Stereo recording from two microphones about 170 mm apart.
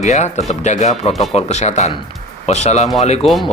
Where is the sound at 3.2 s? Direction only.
Centre (ahead or behind).